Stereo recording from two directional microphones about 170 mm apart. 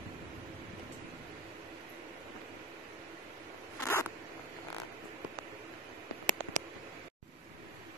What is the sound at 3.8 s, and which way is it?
Zipper, 15° left (ahead or behind).